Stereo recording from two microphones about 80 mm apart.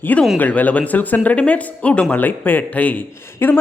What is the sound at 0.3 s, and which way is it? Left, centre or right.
Speech, left.